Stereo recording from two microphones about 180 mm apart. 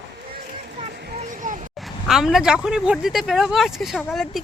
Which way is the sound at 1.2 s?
45° right (ahead or behind).